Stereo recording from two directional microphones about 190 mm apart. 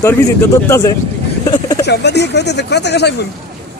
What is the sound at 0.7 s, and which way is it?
Speech, 15° left (ahead or behind).